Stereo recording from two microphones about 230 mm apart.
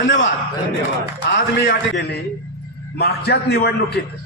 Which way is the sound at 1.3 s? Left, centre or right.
Left.